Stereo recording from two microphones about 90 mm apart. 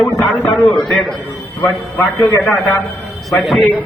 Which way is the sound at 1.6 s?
20° left (ahead or behind).